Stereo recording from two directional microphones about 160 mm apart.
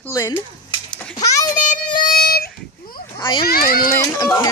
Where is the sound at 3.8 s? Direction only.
25° left (ahead or behind).